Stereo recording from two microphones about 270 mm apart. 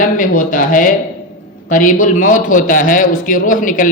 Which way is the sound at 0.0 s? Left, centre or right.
Left.